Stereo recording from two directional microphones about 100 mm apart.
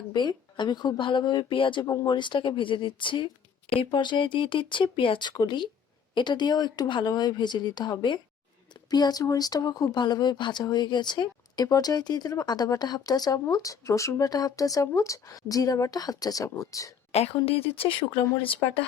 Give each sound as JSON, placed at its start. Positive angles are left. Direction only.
{"t": 0.1, "sound": "speech", "side_deg": 45}
{"t": 1.8, "sound": "speech", "side_deg": 30}
{"t": 2.0, "sound": "speech", "side_deg": 50}
{"t": 17.1, "sound": "speech", "side_deg": 90}